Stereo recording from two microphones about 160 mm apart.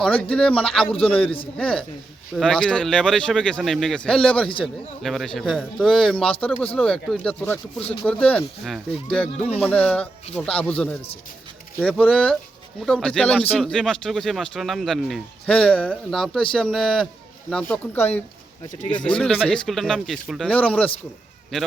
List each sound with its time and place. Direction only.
0.2 s speech: 5° left (ahead or behind)
6.2 s speech: 35° left (ahead or behind)
6.7 s speech: 5° left (ahead or behind)
7.8 s speech: 40° left (ahead or behind)
8.0 s speech: 10° left (ahead or behind)